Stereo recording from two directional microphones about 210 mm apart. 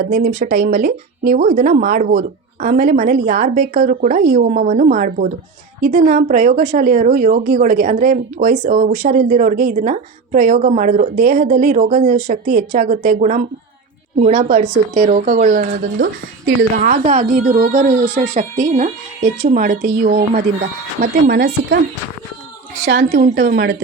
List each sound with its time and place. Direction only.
0.1 s a woman's voice: 40° right (ahead or behind)
22.9 s a woman's voice: 50° right (ahead or behind)